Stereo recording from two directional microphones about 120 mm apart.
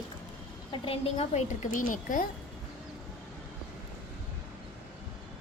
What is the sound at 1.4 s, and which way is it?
Speech, 90° left.